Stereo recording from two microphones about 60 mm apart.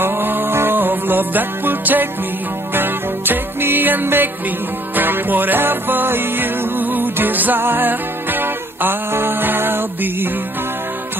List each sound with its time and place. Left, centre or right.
0.0 s music: right